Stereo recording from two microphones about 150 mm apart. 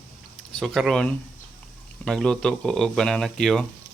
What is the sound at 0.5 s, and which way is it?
Speech, centre (ahead or behind).